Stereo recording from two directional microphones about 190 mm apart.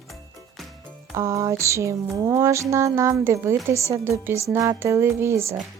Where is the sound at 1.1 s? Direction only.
15° right (ahead or behind).